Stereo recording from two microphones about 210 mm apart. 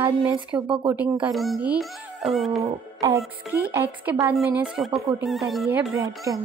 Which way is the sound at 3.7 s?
10° right (ahead or behind).